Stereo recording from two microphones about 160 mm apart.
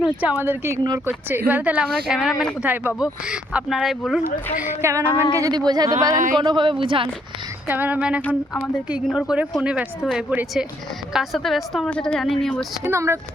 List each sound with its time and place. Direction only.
0.0 s speech: 5° right (ahead or behind)
4.6 s a woman's voice: 15° right (ahead or behind); by 7.1 s 35° right (ahead or behind)
7.7 s speech: 10° right (ahead or behind)
12.8 s speech: 15° right (ahead or behind)